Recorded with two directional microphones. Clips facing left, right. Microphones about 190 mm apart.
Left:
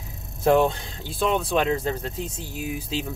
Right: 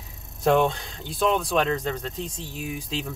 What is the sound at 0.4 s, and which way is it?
Speech, centre (ahead or behind).